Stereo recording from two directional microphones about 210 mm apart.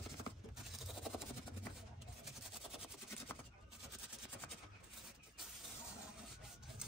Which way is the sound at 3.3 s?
10° left (ahead or behind).